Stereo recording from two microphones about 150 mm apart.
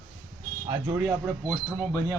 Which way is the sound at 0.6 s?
20° right (ahead or behind).